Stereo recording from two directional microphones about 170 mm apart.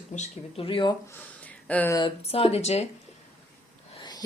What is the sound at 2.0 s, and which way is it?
Speech, 30° left (ahead or behind).